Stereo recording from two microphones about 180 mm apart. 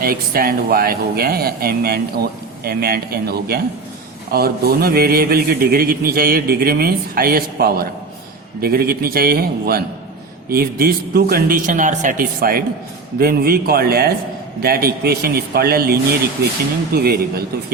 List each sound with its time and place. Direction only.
0.0 s a man's voice: 55° right (ahead or behind)